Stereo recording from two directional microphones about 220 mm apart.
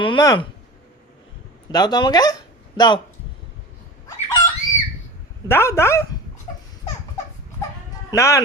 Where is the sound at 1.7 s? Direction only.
20° left (ahead or behind).